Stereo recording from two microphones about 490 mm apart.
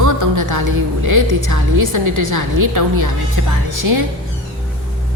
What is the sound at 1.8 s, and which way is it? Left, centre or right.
Speech, right.